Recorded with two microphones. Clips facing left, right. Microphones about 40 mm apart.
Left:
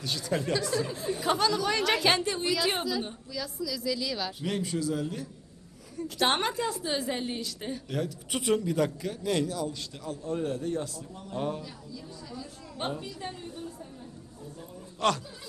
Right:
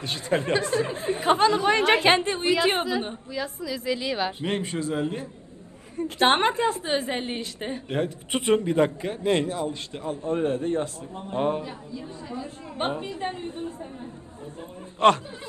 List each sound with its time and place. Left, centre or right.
0.0 s a woman's voice: right
15.0 s a woman's voice: right